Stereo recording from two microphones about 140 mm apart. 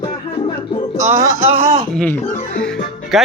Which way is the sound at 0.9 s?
20° right (ahead or behind).